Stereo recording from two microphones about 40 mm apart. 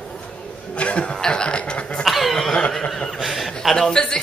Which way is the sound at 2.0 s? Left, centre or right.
Centre.